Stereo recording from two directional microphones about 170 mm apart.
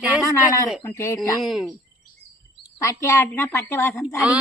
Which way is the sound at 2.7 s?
20° left (ahead or behind).